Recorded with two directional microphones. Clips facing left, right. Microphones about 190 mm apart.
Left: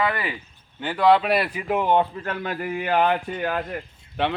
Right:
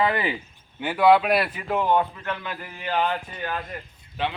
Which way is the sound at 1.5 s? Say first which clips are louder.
Left 2 dB; 10° left (ahead or behind).